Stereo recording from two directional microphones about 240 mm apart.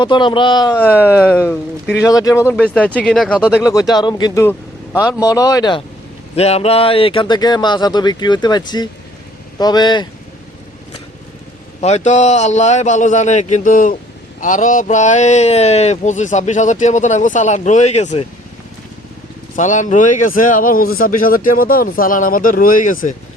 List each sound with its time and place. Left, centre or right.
0.0 s speech: centre
11.8 s speech: left
19.5 s speech: left